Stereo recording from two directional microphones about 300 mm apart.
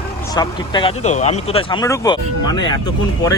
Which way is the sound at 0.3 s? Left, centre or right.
Centre.